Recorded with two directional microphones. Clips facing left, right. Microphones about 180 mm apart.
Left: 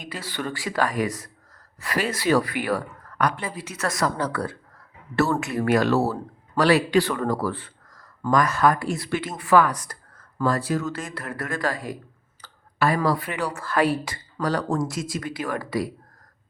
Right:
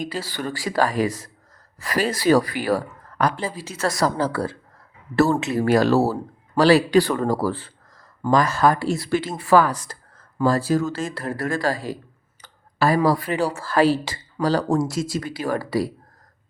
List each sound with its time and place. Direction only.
0.0 s a woman's voice: 30° right (ahead or behind)
6.0 s speech: 10° right (ahead or behind)
6.6 s a woman's voice: 30° right (ahead or behind)
12.4 s clicking: 15° right (ahead or behind)
13.1 s a woman's voice: 30° right (ahead or behind)